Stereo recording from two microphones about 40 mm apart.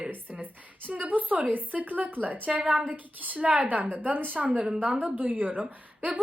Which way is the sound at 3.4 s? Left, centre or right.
Right.